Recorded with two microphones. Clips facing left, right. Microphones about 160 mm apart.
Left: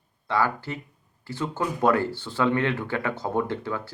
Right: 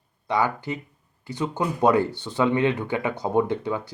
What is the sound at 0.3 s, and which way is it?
Speech, 15° right (ahead or behind).